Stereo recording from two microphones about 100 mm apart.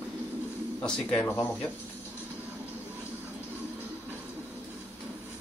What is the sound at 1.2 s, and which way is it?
Speech, 25° left (ahead or behind).